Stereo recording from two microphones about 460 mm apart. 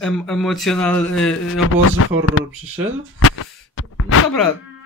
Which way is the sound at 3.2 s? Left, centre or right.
Left.